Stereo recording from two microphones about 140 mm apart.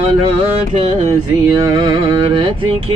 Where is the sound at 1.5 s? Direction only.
30° right (ahead or behind).